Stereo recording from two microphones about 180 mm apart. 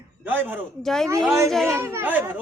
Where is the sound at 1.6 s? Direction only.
15° right (ahead or behind).